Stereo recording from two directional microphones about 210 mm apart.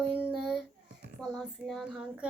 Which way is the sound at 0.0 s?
5° right (ahead or behind).